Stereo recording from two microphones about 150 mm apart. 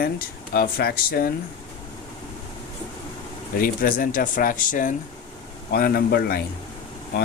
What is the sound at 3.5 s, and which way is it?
Speech, 70° left (ahead or behind).